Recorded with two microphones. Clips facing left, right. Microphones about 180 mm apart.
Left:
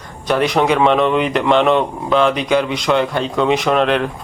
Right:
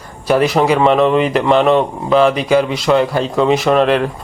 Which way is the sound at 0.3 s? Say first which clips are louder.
Right 3 dB; 5° right (ahead or behind).